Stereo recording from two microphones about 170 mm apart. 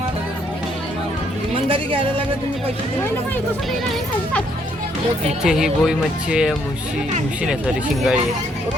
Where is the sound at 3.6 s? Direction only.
Centre (ahead or behind).